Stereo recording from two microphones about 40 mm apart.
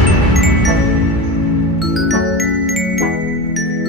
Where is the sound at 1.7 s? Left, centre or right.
Centre.